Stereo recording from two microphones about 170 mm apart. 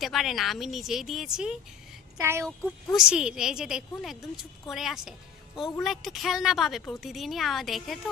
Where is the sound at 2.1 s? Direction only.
15° right (ahead or behind).